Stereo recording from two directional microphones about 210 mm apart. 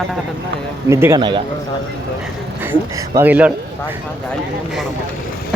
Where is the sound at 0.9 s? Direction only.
10° right (ahead or behind).